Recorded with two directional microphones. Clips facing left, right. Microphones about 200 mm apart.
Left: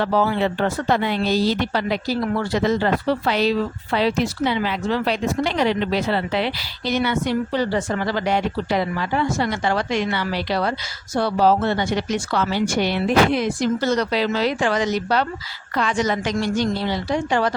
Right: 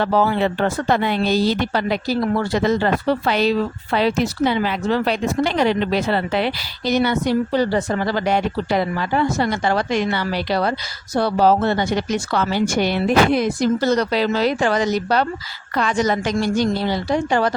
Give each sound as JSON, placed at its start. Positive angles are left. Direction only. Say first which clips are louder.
{"t": 0.0, "sound": "a woman's voice", "louder": "right 2 dB", "side_deg": -50}